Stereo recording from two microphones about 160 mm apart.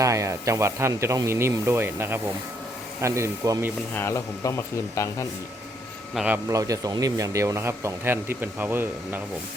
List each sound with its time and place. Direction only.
0.0 s speech: 20° right (ahead or behind)
3.9 s speech: 15° left (ahead or behind)
6.1 s speech: 10° right (ahead or behind)
6.5 s speech: 20° right (ahead or behind)